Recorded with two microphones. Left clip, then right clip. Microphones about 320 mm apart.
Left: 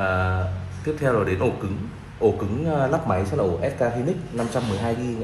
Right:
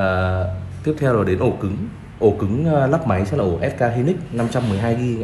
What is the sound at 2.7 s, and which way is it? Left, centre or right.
Speech, right.